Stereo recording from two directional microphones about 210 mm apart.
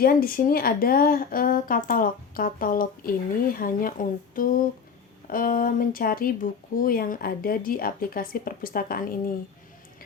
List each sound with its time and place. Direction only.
0.0 s speech: 45° left (ahead or behind)